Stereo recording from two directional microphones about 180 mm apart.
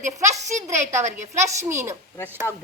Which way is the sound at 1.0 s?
40° right (ahead or behind).